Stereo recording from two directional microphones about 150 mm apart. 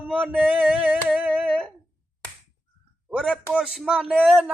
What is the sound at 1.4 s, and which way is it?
Speech, 5° left (ahead or behind).